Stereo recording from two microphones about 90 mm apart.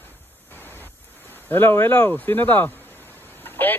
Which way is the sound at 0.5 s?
20° left (ahead or behind).